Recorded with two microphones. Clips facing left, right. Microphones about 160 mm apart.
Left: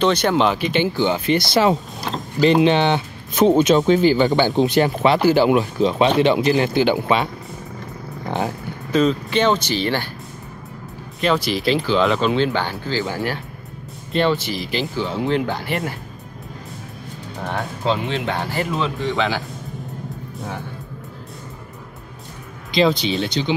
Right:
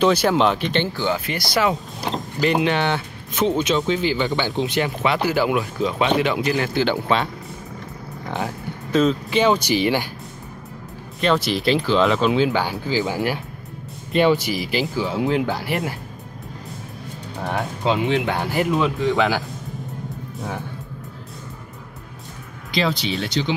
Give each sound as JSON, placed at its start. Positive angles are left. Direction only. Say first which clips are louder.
{"t": 0.0, "sound": "speech", "louder": "even", "side_deg": -5}
{"t": 2.1, "sound": "vehicle", "louder": "right 1 dB", "side_deg": -20}
{"t": 2.4, "sound": "speech", "louder": "left 5 dB", "side_deg": 25}
{"t": 3.3, "sound": "speech", "louder": "left 6 dB", "side_deg": 45}
{"t": 8.9, "sound": "speech", "louder": "left 1 dB", "side_deg": -5}
{"t": 11.2, "sound": "speech", "louder": "even", "side_deg": 0}
{"t": 18.0, "sound": "speech", "louder": "right 3 dB", "side_deg": -15}
{"t": 18.9, "sound": "speech", "louder": "right 2 dB", "side_deg": 0}
{"t": 22.7, "sound": "speech", "louder": "left 5 dB", "side_deg": 20}